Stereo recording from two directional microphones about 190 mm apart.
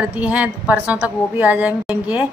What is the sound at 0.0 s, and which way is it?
A woman's voice, 5° right (ahead or behind).